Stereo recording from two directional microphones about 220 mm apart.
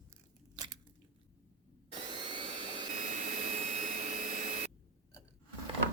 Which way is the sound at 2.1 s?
20° right (ahead or behind).